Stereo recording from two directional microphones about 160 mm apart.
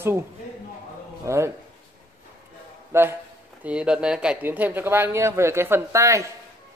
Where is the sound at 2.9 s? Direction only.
15° right (ahead or behind).